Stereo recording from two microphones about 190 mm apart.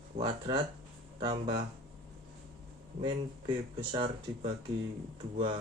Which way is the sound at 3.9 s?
25° right (ahead or behind).